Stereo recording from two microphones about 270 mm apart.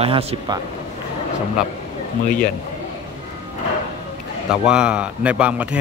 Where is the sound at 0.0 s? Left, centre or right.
Right.